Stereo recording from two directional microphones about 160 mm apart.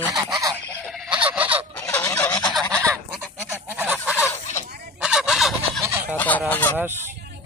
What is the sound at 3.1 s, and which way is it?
Goose, 10° right (ahead or behind).